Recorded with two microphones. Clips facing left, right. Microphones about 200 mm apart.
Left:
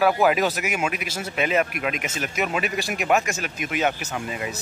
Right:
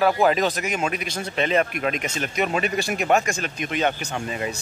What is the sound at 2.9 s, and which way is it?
Speech, 35° right (ahead or behind).